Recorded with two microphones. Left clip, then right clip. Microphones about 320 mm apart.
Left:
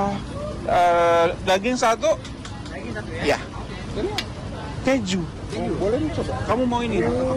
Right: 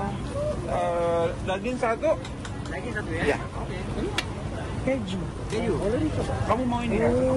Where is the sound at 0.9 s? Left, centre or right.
Centre.